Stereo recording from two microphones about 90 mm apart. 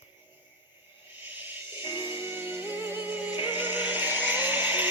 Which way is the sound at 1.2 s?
20° right (ahead or behind).